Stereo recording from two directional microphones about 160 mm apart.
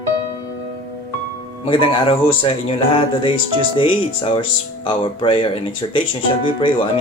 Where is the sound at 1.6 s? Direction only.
35° left (ahead or behind).